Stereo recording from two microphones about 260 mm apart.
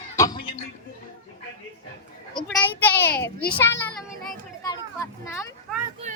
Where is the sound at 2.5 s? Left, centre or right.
Centre.